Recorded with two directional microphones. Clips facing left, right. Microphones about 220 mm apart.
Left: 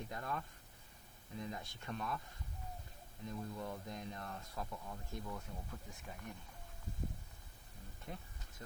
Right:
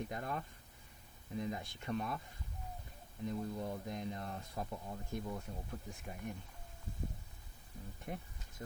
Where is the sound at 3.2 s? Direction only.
20° right (ahead or behind).